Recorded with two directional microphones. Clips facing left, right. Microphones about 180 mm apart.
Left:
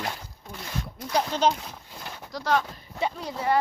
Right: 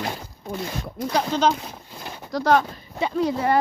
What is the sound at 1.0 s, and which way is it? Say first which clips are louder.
Speech: right 3 dB; 90° right.